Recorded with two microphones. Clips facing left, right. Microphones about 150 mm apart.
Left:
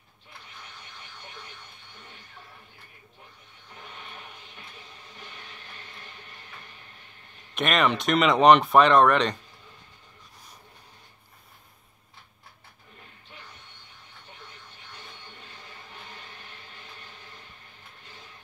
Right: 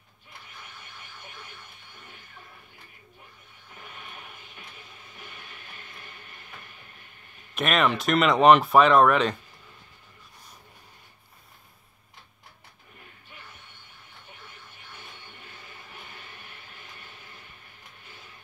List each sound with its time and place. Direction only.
7.5 s speech: centre (ahead or behind)